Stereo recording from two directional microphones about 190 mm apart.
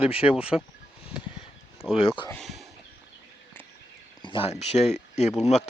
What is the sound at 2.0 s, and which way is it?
Speech, 30° left (ahead or behind).